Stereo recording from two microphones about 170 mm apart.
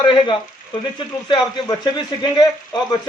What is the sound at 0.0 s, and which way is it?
Speech, 30° left (ahead or behind).